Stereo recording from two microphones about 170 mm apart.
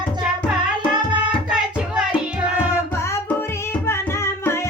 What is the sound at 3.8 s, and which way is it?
Music, 15° left (ahead or behind).